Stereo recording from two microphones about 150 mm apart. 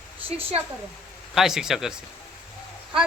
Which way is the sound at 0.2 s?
40° right (ahead or behind).